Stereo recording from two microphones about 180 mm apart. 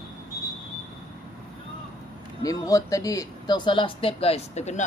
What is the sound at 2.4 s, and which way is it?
Speech, 20° left (ahead or behind).